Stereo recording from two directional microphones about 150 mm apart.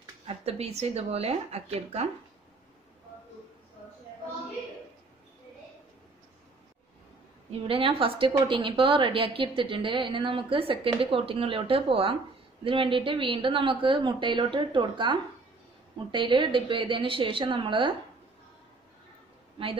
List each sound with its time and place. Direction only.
0.3 s speech: 45° right (ahead or behind)
7.6 s a woman's voice: 40° right (ahead or behind)